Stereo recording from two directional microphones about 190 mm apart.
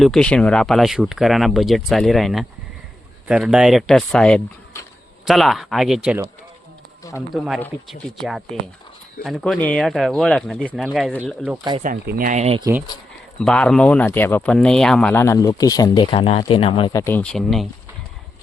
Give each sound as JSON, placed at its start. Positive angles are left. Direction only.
{"t": 0.0, "sound": "speech", "side_deg": 5}
{"t": 5.2, "sound": "speech", "side_deg": 0}
{"t": 7.3, "sound": "speech", "side_deg": 0}
{"t": 11.8, "sound": "speech", "side_deg": -50}
{"t": 13.4, "sound": "speech", "side_deg": 5}
{"t": 16.9, "sound": "speech", "side_deg": 15}